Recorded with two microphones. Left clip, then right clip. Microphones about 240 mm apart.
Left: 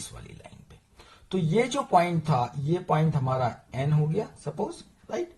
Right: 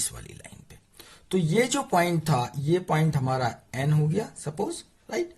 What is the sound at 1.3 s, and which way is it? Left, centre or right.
Speech, right.